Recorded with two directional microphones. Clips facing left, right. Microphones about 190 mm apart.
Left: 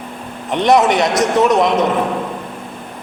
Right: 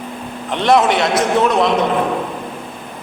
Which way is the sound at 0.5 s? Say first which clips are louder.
Left 1 dB; 20° left (ahead or behind).